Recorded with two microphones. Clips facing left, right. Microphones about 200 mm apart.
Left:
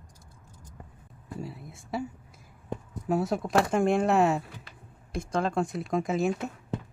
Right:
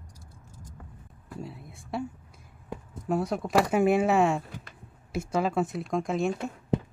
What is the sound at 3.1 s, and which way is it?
Speech, centre (ahead or behind).